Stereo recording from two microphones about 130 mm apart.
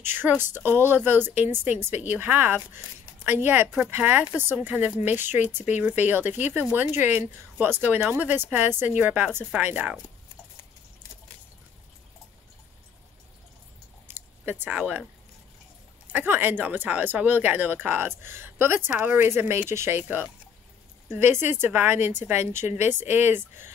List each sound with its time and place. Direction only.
0.0 s a woman's voice: 15° right (ahead or behind)
3.6 s speech: centre (ahead or behind)
3.9 s a woman's voice: 15° right (ahead or behind)
14.0 s a sound: 15° right (ahead or behind)
16.1 s a woman's voice: 15° right (ahead or behind)
21.1 s a woman's voice: 15° right (ahead or behind)